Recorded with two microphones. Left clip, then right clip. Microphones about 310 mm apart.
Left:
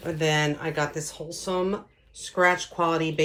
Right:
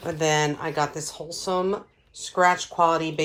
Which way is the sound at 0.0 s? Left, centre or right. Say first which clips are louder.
Right 2 dB; right.